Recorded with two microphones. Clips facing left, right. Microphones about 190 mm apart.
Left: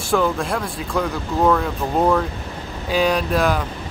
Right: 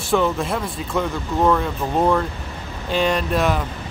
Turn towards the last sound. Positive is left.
turn(degrees=0)  # may be behind; listen again after turning